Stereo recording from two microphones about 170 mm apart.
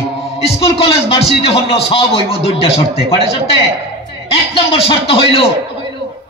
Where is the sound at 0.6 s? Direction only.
35° left (ahead or behind).